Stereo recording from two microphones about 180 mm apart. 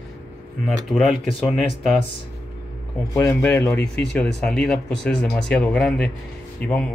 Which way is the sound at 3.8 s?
65° left (ahead or behind).